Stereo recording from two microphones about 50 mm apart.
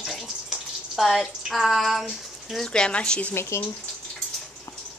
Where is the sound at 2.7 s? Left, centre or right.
Centre.